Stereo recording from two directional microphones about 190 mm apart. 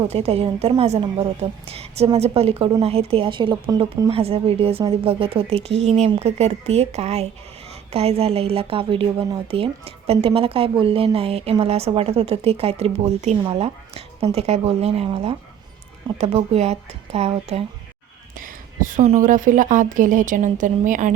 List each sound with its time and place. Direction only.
0.1 s a woman's voice: 35° right (ahead or behind)
4.1 s a woman's voice: 30° right (ahead or behind)
18.3 s a woman's voice: 45° right (ahead or behind)